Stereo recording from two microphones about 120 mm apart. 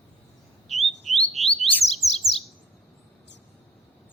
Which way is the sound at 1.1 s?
Centre (ahead or behind).